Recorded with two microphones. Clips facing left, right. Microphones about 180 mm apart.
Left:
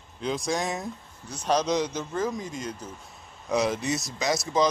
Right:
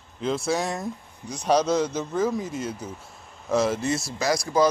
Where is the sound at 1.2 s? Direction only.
10° right (ahead or behind).